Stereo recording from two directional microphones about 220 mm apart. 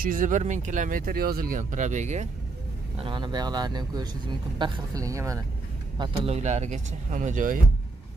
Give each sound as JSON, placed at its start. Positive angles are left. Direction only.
{"t": 0.0, "sound": "speech", "side_deg": -35}
{"t": 3.0, "sound": "a man's voice", "side_deg": -20}
{"t": 5.9, "sound": "speech", "side_deg": -30}